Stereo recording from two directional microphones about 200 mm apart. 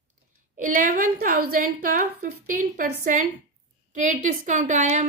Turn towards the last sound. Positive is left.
turn(degrees=-35)  # may be behind; listen again after turning